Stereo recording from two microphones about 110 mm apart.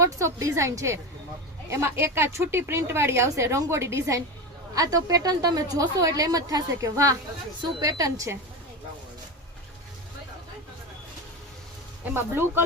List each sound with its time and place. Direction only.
0.0 s a woman's voice: 30° right (ahead or behind)
12.1 s a woman's voice: 20° right (ahead or behind)